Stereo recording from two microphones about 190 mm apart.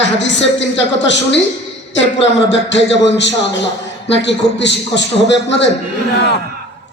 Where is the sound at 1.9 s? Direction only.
70° left (ahead or behind).